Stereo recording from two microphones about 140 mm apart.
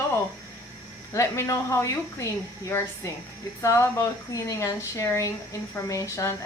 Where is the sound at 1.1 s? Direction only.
20° left (ahead or behind).